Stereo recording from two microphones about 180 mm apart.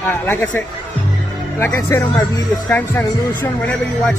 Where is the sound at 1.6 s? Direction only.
15° left (ahead or behind).